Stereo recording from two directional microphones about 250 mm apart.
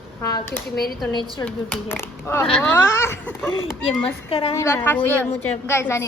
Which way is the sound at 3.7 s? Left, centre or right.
Centre.